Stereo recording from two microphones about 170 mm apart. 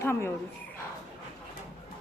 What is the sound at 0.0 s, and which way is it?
Speech, 15° left (ahead or behind).